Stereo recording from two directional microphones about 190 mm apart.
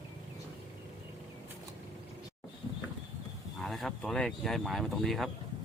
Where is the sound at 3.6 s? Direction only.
Centre (ahead or behind).